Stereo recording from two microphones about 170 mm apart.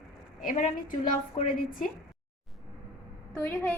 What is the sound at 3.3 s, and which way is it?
Speech, 15° left (ahead or behind).